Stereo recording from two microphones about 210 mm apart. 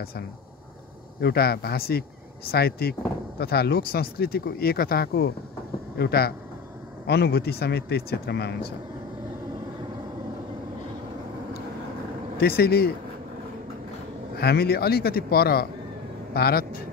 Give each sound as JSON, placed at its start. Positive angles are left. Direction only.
{"t": 1.2, "sound": "speech", "side_deg": 50}
{"t": 12.4, "sound": "speech", "side_deg": 45}
{"t": 14.3, "sound": "speech", "side_deg": 50}